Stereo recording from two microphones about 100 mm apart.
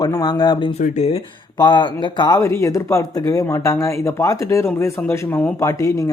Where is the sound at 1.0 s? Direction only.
75° left (ahead or behind).